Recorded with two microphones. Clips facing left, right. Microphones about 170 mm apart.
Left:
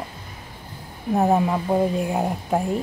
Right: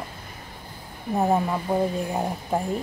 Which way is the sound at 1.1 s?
5° left (ahead or behind).